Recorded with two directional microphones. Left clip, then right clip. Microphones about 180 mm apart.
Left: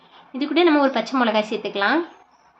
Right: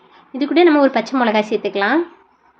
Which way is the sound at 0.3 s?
20° right (ahead or behind).